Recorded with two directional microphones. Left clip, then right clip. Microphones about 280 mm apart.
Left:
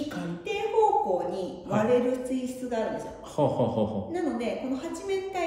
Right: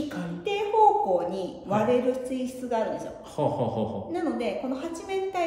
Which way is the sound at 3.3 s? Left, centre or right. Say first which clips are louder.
Left 1 dB; centre.